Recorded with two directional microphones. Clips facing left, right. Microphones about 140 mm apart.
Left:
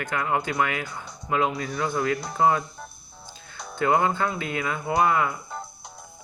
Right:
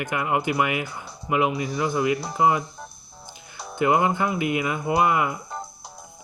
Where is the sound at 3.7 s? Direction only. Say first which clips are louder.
Right 2 dB; 20° right (ahead or behind).